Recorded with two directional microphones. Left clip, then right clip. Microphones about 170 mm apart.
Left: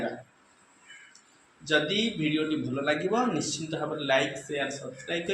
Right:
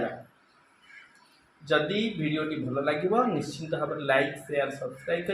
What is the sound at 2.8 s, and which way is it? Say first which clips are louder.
A man's voice: right 2 dB; 40° right (ahead or behind).